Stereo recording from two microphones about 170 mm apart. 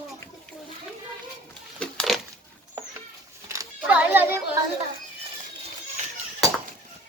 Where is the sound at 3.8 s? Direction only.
10° right (ahead or behind).